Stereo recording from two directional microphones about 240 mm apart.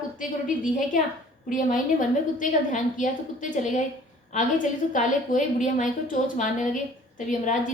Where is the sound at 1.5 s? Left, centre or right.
Left.